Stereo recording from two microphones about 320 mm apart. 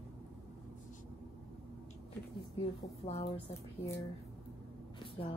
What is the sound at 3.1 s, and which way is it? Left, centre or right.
Speech, centre.